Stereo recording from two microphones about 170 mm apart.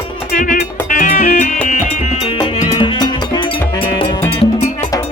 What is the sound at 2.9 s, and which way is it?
Music, 25° left (ahead or behind).